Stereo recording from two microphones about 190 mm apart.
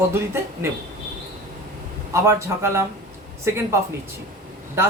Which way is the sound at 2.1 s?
15° right (ahead or behind).